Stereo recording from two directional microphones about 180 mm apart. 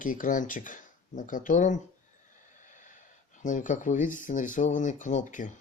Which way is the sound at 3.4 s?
45° left (ahead or behind).